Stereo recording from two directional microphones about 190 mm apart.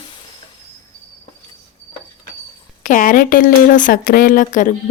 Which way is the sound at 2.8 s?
45° left (ahead or behind).